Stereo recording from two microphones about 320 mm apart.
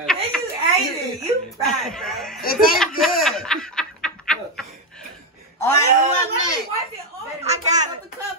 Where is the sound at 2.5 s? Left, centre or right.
Centre.